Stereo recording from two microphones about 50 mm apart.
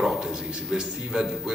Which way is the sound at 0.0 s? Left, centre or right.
Centre.